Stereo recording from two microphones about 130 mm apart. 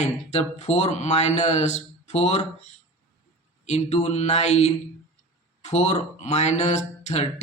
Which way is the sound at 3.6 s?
60° left (ahead or behind).